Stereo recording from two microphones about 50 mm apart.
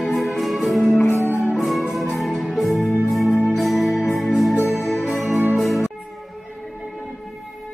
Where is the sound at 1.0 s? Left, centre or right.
Left.